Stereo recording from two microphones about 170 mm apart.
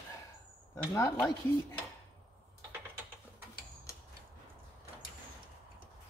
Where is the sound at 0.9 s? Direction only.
15° left (ahead or behind).